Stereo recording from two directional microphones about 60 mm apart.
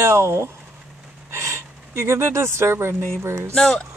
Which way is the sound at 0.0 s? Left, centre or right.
Right.